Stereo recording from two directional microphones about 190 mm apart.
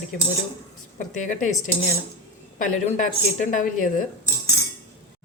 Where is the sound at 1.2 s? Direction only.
40° left (ahead or behind).